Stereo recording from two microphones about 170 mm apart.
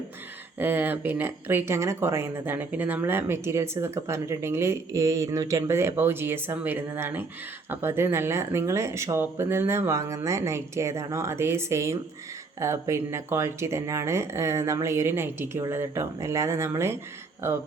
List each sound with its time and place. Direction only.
0.6 s speech: 10° right (ahead or behind)